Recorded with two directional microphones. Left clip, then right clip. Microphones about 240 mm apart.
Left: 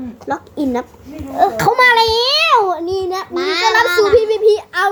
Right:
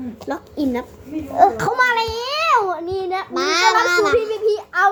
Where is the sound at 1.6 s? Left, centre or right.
Left.